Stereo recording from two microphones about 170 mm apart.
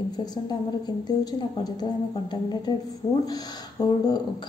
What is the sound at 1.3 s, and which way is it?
A woman's voice, 25° left (ahead or behind).